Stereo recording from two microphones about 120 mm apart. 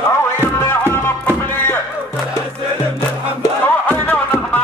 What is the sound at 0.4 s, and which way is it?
Music, 25° left (ahead or behind).